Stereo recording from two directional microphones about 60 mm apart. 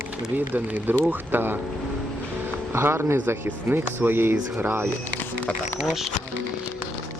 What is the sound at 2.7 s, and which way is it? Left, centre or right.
Speech, right.